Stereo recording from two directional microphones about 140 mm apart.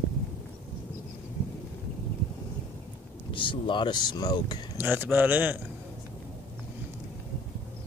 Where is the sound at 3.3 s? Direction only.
35° left (ahead or behind).